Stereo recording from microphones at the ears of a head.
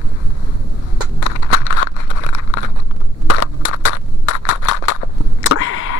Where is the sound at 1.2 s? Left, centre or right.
Left.